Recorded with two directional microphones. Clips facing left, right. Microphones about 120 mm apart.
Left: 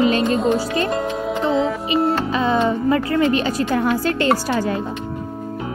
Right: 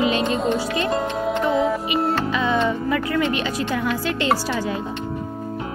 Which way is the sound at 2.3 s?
35° left (ahead or behind).